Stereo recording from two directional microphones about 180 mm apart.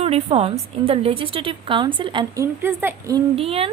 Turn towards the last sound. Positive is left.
turn(degrees=-35)  # may be behind; listen again after turning